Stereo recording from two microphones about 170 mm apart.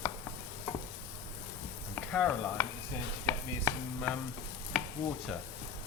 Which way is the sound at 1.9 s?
10° left (ahead or behind).